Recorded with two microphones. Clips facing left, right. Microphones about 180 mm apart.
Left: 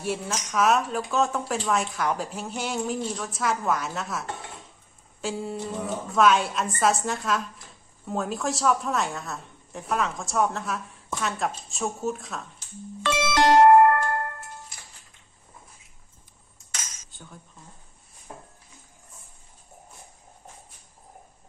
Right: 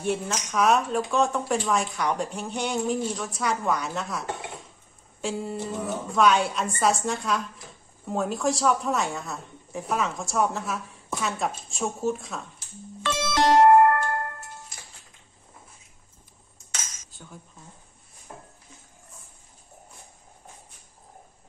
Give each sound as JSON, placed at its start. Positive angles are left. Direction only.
{"t": 0.0, "sound": "a woman's voice", "side_deg": 0}
{"t": 13.0, "sound": "music", "side_deg": 75}
{"t": 17.1, "sound": "cutlery", "side_deg": 0}